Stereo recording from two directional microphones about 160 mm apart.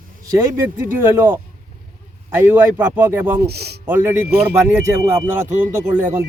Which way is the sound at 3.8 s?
10° right (ahead or behind).